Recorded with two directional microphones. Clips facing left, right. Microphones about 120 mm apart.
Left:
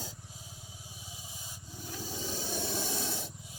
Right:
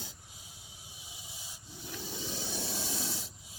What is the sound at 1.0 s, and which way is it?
Rub, 40° left (ahead or behind).